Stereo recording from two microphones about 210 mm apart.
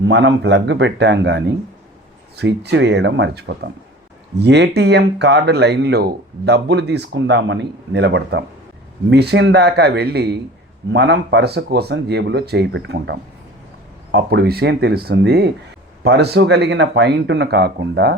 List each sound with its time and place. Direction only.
0.0 s speech: 60° right (ahead or behind)